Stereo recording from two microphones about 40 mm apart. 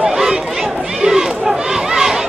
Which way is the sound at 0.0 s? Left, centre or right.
Centre.